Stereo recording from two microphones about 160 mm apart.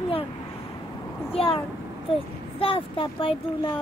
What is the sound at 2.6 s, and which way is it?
A child's voice, 35° left (ahead or behind).